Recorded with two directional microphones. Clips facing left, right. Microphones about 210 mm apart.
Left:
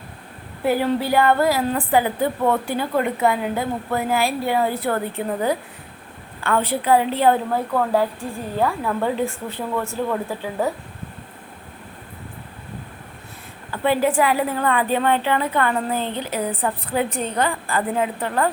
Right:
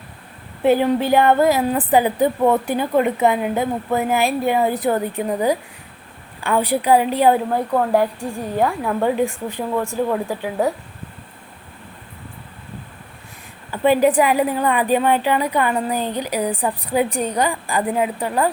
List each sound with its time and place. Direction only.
0.6 s a woman's voice: 20° right (ahead or behind)
13.7 s a woman's voice: 15° right (ahead or behind)